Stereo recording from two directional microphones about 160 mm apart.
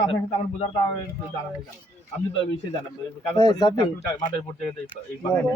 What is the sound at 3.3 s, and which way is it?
Speech, 25° left (ahead or behind).